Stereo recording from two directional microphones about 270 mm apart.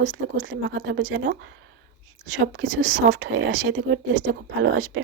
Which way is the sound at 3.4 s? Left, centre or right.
Right.